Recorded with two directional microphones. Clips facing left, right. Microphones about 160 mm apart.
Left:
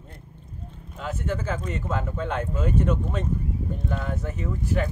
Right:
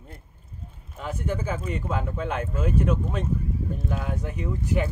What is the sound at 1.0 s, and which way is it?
Speech, 15° right (ahead or behind).